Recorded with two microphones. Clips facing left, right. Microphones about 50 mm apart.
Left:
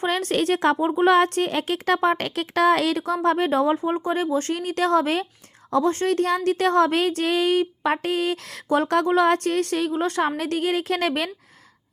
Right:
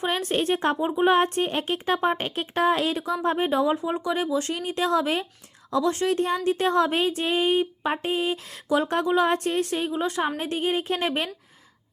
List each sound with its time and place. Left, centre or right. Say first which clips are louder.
0.0 s speech: left 2 dB; left
0.9 s speech: left 1 dB; left
3.8 s a woman's voice: left 3 dB; left
4.1 s a woman's voice: left 2 dB; left
6.1 s speech: left 2 dB; left